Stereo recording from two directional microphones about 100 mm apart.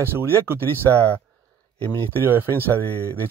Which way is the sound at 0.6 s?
20° left (ahead or behind).